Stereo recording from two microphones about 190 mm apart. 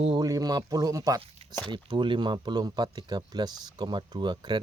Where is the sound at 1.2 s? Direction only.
30° right (ahead or behind).